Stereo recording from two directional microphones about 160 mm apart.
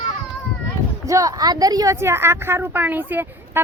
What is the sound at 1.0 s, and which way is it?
A woman's voice, 20° right (ahead or behind).